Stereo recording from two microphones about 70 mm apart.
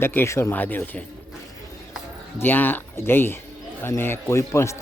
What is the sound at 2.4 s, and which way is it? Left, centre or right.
A man's voice, left.